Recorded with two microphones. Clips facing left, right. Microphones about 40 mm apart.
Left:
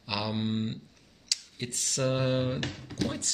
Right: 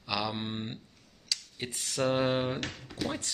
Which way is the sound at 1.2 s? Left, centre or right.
Centre.